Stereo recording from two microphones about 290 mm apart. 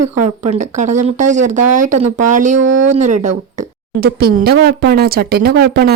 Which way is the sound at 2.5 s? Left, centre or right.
Right.